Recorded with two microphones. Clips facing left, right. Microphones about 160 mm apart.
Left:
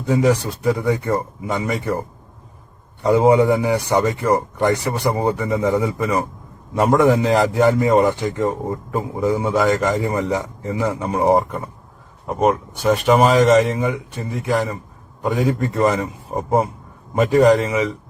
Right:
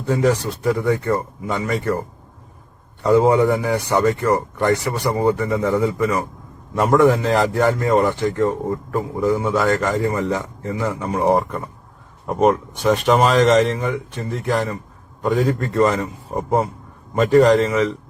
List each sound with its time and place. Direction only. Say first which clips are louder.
0.1 s a man's voice: left 1 dB; 10° left (ahead or behind)
3.0 s a man's voice: left 1 dB; 15° left (ahead or behind)
12.4 s a man's voice: right 1 dB; centre (ahead or behind)